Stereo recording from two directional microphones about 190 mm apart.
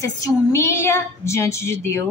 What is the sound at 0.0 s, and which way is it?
A woman's voice, 15° left (ahead or behind).